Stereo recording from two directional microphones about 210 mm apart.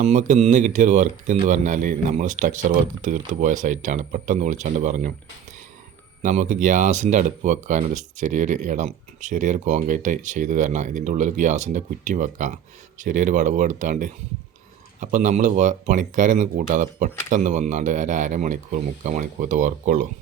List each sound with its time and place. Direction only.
0.0 s speech: 35° right (ahead or behind)
6.2 s speech: 35° right (ahead or behind)